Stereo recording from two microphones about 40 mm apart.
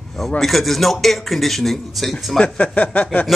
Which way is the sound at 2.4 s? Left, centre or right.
Left.